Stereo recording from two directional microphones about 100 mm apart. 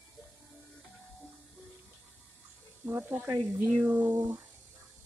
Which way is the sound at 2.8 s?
20° right (ahead or behind).